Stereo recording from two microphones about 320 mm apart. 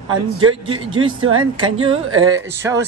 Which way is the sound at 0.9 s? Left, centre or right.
Centre.